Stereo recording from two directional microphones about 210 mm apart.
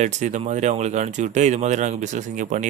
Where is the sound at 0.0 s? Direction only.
35° right (ahead or behind).